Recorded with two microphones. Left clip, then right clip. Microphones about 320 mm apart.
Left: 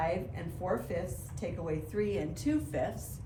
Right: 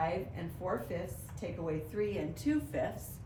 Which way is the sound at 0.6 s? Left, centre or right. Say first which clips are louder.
Left 3 dB; centre.